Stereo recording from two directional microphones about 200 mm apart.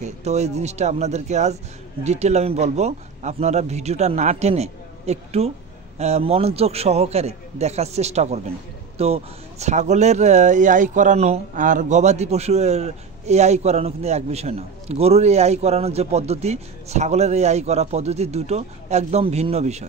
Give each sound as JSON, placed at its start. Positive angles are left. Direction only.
{"t": 0.0, "sound": "speech", "side_deg": -35}